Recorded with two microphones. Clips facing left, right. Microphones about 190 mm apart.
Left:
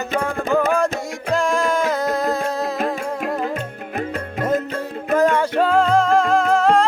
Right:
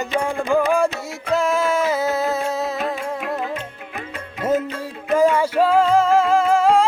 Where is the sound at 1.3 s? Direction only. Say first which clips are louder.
Even; 5° right (ahead or behind).